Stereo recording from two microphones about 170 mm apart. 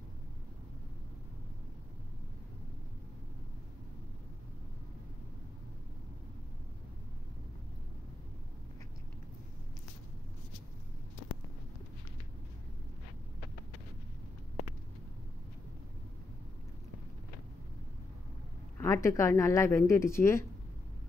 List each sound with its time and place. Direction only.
18.8 s speech: 15° left (ahead or behind)